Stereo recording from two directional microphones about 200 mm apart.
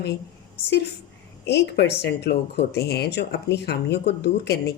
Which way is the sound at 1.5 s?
55° left (ahead or behind).